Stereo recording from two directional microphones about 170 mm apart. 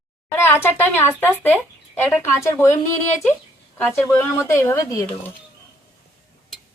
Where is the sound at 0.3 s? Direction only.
15° left (ahead or behind).